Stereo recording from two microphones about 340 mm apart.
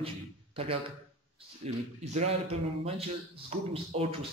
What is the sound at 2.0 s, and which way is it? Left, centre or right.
Speech, centre.